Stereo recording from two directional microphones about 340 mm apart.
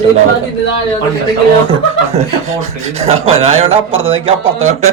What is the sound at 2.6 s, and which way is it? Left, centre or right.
A man's voice, centre.